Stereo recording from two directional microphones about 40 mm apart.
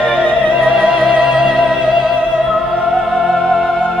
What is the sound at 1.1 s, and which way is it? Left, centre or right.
Music, centre.